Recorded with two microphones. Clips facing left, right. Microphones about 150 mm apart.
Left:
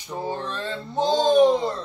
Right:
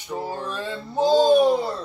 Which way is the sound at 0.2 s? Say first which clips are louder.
Left 3 dB; 10° right (ahead or behind).